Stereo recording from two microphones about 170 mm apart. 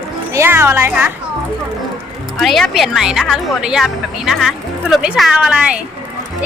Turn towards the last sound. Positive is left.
turn(degrees=-5)  # may be behind; listen again after turning